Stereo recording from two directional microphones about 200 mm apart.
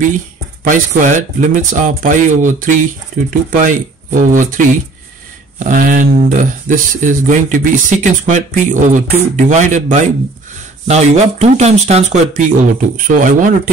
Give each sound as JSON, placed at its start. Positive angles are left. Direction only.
{"t": 0.7, "sound": "speech", "side_deg": -40}